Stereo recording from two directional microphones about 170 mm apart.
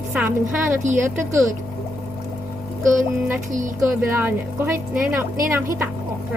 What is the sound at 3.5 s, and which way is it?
Speech, 50° right (ahead or behind).